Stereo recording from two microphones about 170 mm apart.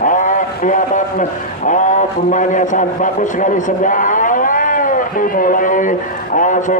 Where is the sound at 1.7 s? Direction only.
45° left (ahead or behind).